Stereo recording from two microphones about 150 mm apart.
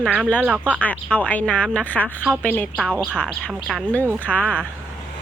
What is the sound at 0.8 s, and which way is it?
Speech, 10° left (ahead or behind).